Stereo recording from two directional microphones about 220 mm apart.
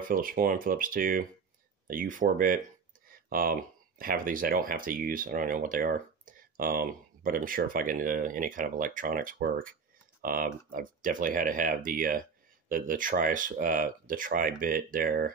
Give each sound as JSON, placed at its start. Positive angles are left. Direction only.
{"t": 0.0, "sound": "speech", "side_deg": -40}
{"t": 3.1, "sound": "a sound", "side_deg": -40}
{"t": 4.0, "sound": "speech", "side_deg": -40}